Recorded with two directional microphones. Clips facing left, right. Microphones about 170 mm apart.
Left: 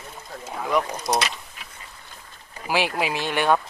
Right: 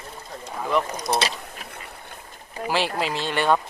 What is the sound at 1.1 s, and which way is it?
Speech, 30° right (ahead or behind).